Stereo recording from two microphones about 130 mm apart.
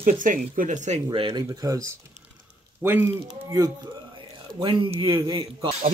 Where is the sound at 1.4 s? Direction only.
25° right (ahead or behind).